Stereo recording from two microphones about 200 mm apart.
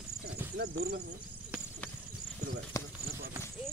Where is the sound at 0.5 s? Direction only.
55° right (ahead or behind).